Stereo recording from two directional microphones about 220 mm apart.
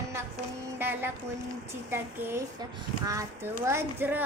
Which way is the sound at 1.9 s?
10° right (ahead or behind).